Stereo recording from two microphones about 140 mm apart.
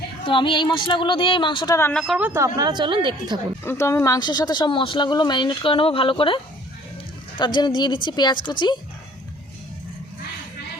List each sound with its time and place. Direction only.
0.3 s speech: 40° left (ahead or behind)
1.9 s speech: 5° left (ahead or behind)
2.1 s speech: 10° right (ahead or behind)
2.4 s a woman's voice: 30° right (ahead or behind)
3.6 s speech: 20° left (ahead or behind)